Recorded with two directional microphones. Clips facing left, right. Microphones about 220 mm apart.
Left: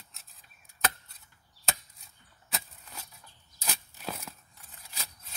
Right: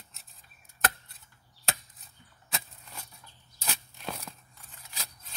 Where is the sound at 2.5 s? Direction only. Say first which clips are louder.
Even; centre (ahead or behind).